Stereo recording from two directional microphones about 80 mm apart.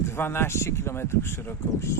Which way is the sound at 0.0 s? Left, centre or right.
Left.